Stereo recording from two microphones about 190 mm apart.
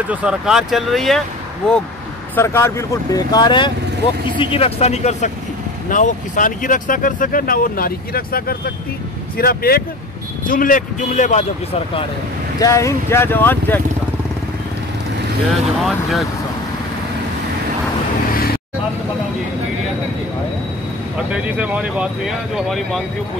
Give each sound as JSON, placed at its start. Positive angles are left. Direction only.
{"t": 0.1, "sound": "speech", "side_deg": -5}
{"t": 12.5, "sound": "speech", "side_deg": 15}
{"t": 15.8, "sound": "speech", "side_deg": 0}
{"t": 21.3, "sound": "speech", "side_deg": -5}